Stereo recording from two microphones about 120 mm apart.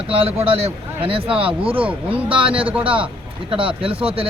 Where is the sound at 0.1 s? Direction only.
50° right (ahead or behind).